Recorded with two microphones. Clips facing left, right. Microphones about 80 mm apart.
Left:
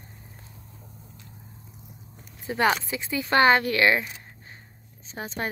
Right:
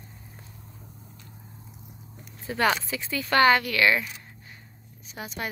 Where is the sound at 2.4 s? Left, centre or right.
Left.